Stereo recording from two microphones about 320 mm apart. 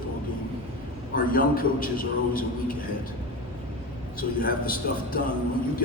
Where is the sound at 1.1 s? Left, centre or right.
Left.